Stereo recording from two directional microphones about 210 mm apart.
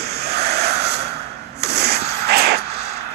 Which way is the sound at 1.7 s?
50° right (ahead or behind).